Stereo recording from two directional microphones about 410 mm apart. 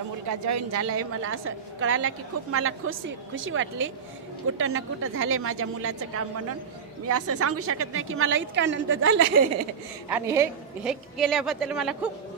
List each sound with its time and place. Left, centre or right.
0.3 s a woman's voice: right
10.0 s a woman's voice: centre